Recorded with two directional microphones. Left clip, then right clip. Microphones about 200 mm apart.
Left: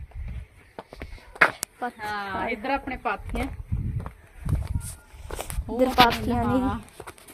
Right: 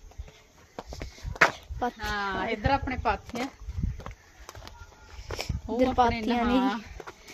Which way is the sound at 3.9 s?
35° left (ahead or behind).